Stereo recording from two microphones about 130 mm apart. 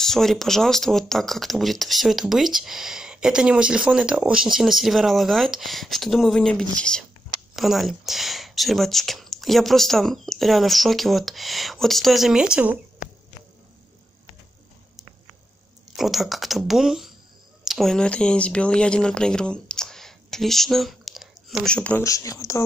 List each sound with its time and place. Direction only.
0.0 s speech: 5° left (ahead or behind)
16.0 s speech: centre (ahead or behind)
22.0 s speech: 25° left (ahead or behind)